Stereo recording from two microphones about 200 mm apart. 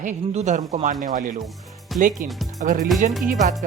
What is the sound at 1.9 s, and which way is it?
Speech, centre (ahead or behind).